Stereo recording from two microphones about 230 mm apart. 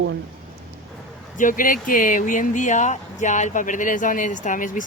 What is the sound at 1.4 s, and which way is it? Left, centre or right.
Speech, left.